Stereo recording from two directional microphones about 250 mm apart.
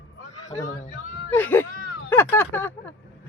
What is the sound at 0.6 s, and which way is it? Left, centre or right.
Speech, left.